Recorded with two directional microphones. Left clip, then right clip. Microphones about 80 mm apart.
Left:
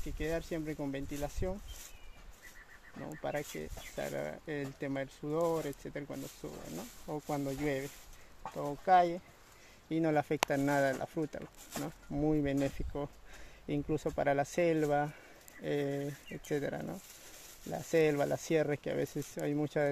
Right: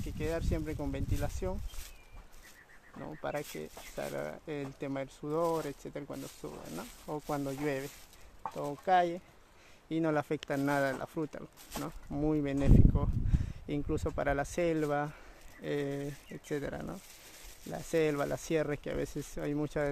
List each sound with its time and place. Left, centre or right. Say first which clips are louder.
0.2 s speech: right 1 dB; centre
3.2 s speech: even; centre
5.3 s speech: right 1 dB; centre
5.7 s speech: even; centre
6.1 s speech: right 1 dB; right
7.2 s speech: right 1 dB; centre
7.5 s speech: even; centre
12.1 s speech: even; centre
12.4 s speech: right 4 dB; centre